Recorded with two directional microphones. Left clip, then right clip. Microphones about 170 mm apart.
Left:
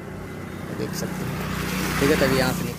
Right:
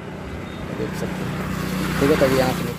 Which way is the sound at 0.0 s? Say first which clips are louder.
Right 3 dB; 65° left (ahead or behind).